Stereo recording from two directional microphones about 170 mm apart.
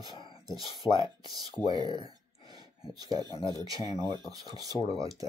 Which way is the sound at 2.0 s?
20° right (ahead or behind).